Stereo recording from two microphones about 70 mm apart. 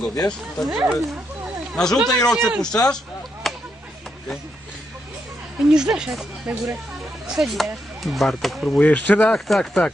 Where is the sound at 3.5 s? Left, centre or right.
Centre.